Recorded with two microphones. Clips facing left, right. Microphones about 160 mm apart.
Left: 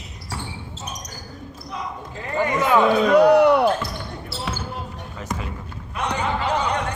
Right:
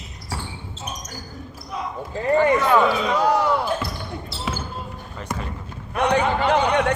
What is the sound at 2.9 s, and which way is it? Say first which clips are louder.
Speech: left 6 dB; 65° left (ahead or behind).